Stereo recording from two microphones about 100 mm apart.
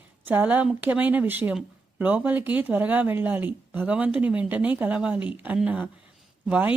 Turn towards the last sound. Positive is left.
turn(degrees=-15)  # may be behind; listen again after turning